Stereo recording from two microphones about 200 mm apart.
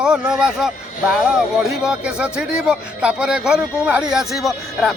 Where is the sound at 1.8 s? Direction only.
5° right (ahead or behind).